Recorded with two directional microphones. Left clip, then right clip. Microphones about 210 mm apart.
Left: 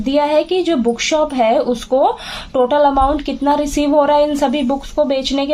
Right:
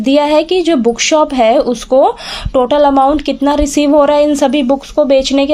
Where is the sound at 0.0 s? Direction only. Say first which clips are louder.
Right 4 dB; 40° right (ahead or behind).